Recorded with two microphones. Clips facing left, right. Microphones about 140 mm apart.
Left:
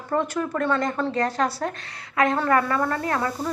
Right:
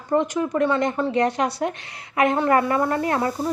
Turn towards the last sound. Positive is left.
turn(degrees=-25)  # may be behind; listen again after turning